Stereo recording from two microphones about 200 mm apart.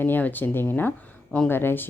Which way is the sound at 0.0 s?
10° left (ahead or behind).